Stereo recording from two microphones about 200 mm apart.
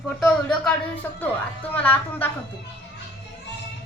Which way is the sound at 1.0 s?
15° left (ahead or behind).